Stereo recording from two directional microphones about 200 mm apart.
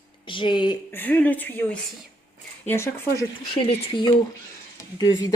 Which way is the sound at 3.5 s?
25° left (ahead or behind).